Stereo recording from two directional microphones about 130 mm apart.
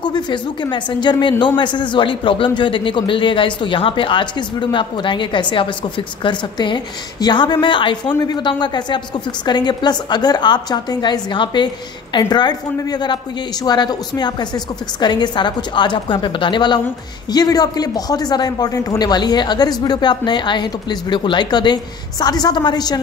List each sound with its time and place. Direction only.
0.0 s a woman's voice: 35° left (ahead or behind)